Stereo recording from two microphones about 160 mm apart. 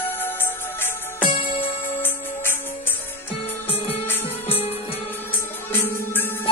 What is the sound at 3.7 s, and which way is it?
Music, 40° left (ahead or behind).